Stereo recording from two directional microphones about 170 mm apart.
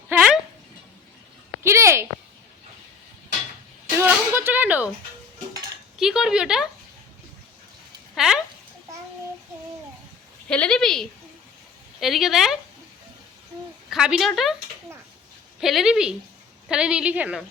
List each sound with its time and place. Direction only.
1.6 s a sound: 15° right (ahead or behind)
3.9 s a sound: 15° right (ahead or behind)
6.0 s a woman's voice: 5° right (ahead or behind)
8.1 s speech: centre (ahead or behind)
10.5 s a woman's voice: 5° left (ahead or behind)
13.9 s a woman's voice: 5° right (ahead or behind)
15.6 s a woman's voice: centre (ahead or behind)